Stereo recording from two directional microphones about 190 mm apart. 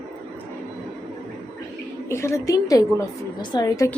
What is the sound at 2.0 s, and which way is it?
A woman's voice, 15° left (ahead or behind).